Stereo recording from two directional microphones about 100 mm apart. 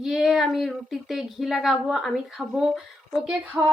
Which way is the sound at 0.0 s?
5° right (ahead or behind).